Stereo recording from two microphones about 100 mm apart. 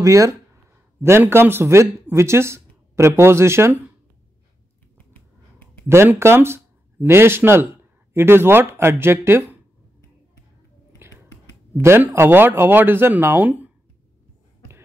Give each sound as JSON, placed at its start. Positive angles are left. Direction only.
{"t": 0.0, "sound": "speech", "side_deg": -30}
{"t": 4.9, "sound": "a sound", "side_deg": 20}
{"t": 5.9, "sound": "speech", "side_deg": -25}
{"t": 11.0, "sound": "whispering", "side_deg": -25}
{"t": 11.8, "sound": "speech", "side_deg": -25}